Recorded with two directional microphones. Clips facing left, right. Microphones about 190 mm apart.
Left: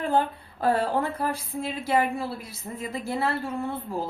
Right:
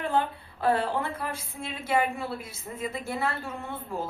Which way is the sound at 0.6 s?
40° left (ahead or behind).